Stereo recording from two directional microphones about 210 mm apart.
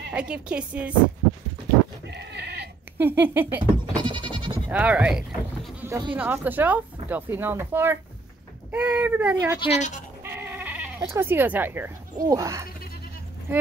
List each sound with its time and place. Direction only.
0.1 s a woman's voice: 5° right (ahead or behind)
2.0 s bleat: 55° right (ahead or behind)
3.0 s speech: 10° right (ahead or behind)
4.0 s sheep: 20° right (ahead or behind)
4.6 s speech: 5° right (ahead or behind)
9.6 s a woman's voice: 30° left (ahead or behind)
10.2 s bleat: 10° right (ahead or behind)